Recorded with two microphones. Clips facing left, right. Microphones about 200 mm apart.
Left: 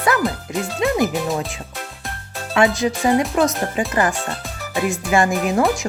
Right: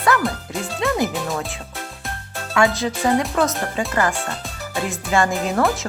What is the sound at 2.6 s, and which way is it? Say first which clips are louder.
Speech: left 2 dB; 15° left (ahead or behind).